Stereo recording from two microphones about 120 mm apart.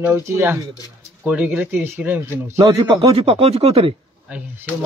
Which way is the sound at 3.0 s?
55° right (ahead or behind).